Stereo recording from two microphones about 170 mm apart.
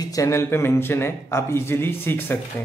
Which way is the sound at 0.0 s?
20° left (ahead or behind).